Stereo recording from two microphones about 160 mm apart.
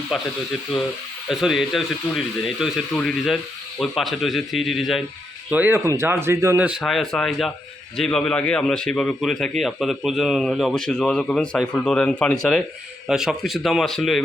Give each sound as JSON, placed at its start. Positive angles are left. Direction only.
{"t": 0.1, "sound": "a man's voice", "side_deg": 0}
{"t": 1.3, "sound": "a man's voice", "side_deg": 0}
{"t": 5.5, "sound": "speech", "side_deg": -10}
{"t": 6.7, "sound": "a man's voice", "side_deg": 0}